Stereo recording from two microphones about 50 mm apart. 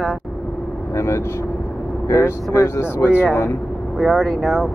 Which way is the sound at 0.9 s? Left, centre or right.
Left.